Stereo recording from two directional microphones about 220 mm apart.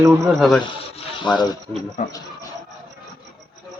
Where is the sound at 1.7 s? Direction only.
20° right (ahead or behind).